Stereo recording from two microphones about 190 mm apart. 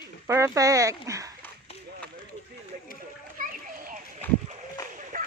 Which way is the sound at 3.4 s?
45° right (ahead or behind).